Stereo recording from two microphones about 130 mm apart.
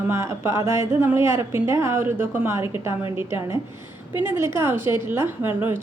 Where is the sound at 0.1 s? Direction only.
20° right (ahead or behind).